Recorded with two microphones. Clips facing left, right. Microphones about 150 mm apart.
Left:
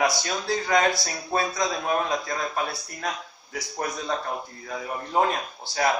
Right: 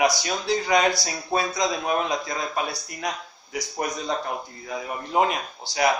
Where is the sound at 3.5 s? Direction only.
15° right (ahead or behind).